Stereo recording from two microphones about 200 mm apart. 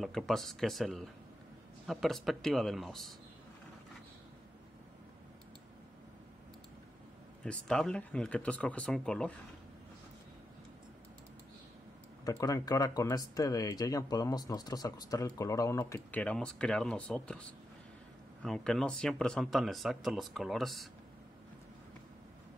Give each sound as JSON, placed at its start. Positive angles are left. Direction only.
{"t": 0.0, "sound": "speech", "side_deg": 0}
{"t": 7.4, "sound": "speech", "side_deg": 5}
{"t": 12.3, "sound": "speech", "side_deg": 15}